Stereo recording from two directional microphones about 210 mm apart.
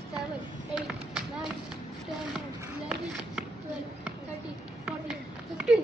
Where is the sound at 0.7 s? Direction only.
5° right (ahead or behind).